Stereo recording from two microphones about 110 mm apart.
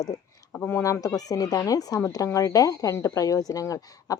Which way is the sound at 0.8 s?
30° left (ahead or behind).